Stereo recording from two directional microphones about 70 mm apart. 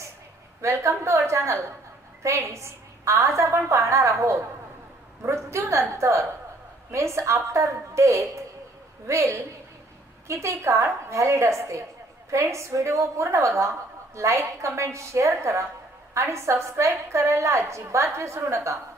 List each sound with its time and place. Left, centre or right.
0.6 s a woman's voice: right